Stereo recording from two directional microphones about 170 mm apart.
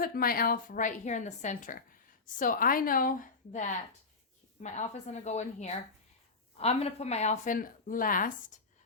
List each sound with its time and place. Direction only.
0.0 s a woman's voice: 60° left (ahead or behind)